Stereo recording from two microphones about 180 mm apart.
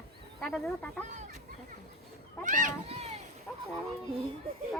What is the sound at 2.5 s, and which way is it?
Speech, 45° right (ahead or behind).